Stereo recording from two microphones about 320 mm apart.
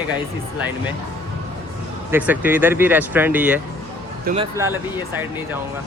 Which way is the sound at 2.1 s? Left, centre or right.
Centre.